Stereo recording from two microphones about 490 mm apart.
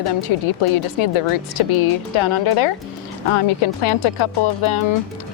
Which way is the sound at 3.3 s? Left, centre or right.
Left.